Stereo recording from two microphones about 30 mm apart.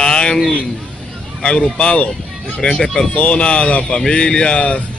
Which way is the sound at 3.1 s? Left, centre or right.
Left.